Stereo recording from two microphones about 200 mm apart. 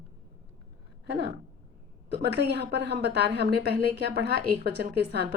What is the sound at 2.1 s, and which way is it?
A woman's voice, 55° right (ahead or behind).